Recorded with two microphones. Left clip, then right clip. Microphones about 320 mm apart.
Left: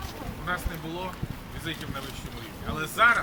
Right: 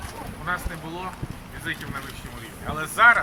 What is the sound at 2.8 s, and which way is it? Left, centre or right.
Speech, centre.